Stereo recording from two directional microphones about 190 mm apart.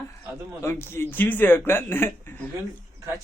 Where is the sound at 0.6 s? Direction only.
15° left (ahead or behind).